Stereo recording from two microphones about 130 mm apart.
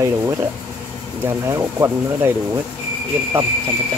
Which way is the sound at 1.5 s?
20° right (ahead or behind).